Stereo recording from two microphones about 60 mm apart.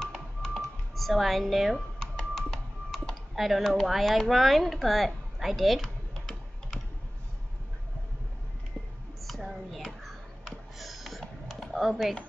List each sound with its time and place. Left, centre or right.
0.4 s music: centre
2.1 s typing: centre
3.3 s speech: centre
9.2 s a sound: centre